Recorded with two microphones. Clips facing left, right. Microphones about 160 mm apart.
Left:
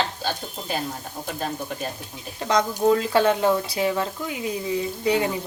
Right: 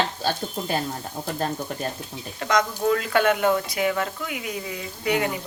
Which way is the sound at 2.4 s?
30° left (ahead or behind).